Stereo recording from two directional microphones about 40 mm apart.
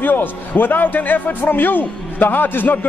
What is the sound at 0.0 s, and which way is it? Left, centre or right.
A man's voice, left.